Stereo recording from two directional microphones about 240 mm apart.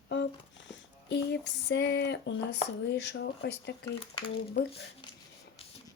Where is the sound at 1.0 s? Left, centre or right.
Left.